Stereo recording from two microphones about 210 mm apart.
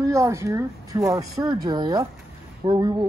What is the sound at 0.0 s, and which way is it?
Speech, 15° right (ahead or behind).